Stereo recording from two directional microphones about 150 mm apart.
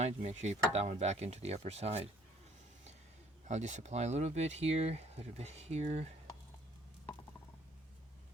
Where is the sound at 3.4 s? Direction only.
50° right (ahead or behind).